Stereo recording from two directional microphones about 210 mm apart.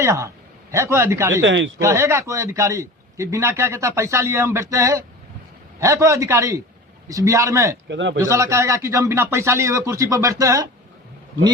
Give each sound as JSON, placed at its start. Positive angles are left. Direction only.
{"t": 0.0, "sound": "a man's voice", "side_deg": -15}
{"t": 1.4, "sound": "speech", "side_deg": -60}
{"t": 1.8, "sound": "a man's voice", "side_deg": -15}
{"t": 7.9, "sound": "speech", "side_deg": -60}
{"t": 8.2, "sound": "a man's voice", "side_deg": -15}